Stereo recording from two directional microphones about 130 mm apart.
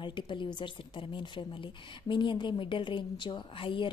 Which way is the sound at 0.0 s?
40° left (ahead or behind).